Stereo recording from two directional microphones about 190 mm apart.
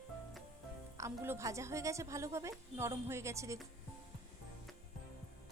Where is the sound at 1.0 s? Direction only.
15° right (ahead or behind).